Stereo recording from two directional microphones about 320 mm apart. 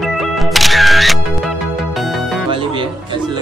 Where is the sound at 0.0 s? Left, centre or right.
Centre.